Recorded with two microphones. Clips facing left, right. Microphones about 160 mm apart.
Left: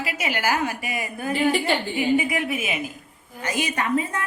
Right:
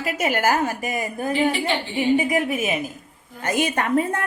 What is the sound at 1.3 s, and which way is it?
Speech, 45° left (ahead or behind).